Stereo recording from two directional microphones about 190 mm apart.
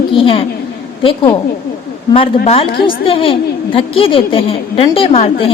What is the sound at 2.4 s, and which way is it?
A woman's voice, 35° left (ahead or behind).